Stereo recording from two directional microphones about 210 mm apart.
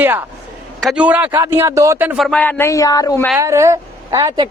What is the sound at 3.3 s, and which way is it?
Speech, 15° right (ahead or behind).